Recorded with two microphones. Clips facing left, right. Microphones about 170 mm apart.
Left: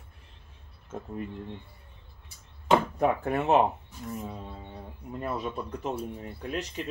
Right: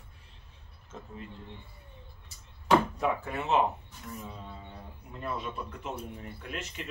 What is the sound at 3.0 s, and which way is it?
Speech, 50° left (ahead or behind).